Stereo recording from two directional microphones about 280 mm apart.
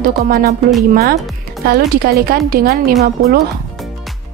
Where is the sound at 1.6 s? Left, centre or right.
Right.